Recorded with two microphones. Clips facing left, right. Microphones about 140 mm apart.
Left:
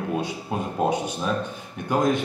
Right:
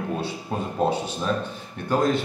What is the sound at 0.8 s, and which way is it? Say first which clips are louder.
A man's voice: right 1 dB; 15° left (ahead or behind).